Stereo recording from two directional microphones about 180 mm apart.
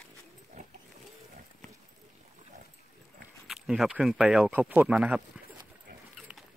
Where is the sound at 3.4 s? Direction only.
Centre (ahead or behind).